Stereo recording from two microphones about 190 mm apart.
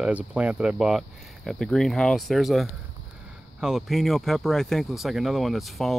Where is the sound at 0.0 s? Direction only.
5° right (ahead or behind).